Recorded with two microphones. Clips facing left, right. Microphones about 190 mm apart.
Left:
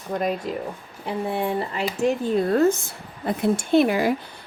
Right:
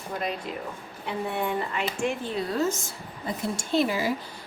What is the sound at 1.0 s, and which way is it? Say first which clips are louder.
Speech: left 4 dB; 35° left (ahead or behind).